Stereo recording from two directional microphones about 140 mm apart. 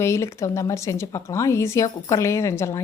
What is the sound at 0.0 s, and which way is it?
Speech, 20° left (ahead or behind).